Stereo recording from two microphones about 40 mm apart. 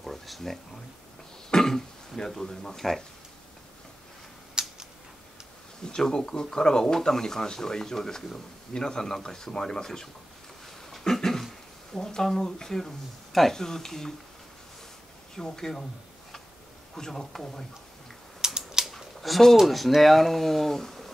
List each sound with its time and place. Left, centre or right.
0.0 s a sound: centre
1.5 s speech: centre
4.6 s a sound: centre
5.9 s speech: centre
15.3 s speech: centre
16.9 s speech: centre
18.4 s typing: centre
18.9 s a sound: centre
19.6 s speech: centre